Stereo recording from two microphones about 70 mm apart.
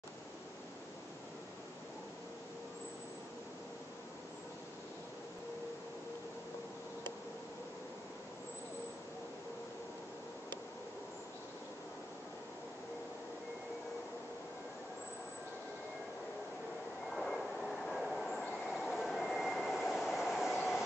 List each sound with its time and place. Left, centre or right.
17.1 s train: centre